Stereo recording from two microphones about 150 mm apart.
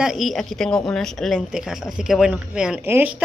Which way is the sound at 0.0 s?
Centre (ahead or behind).